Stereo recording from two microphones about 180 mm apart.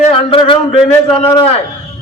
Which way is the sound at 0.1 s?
30° left (ahead or behind).